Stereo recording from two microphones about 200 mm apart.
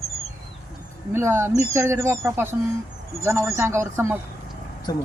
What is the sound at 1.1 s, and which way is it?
Speech, 10° right (ahead or behind).